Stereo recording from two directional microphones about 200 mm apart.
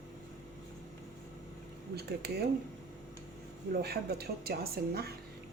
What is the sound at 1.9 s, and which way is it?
Speech, 55° right (ahead or behind).